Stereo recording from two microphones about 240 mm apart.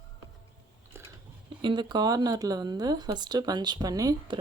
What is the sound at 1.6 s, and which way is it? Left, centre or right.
Speech, centre.